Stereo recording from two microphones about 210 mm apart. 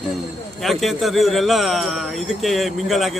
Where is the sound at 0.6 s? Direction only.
Centre (ahead or behind).